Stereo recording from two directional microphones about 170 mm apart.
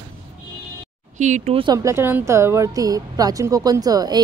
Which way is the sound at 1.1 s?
45° right (ahead or behind).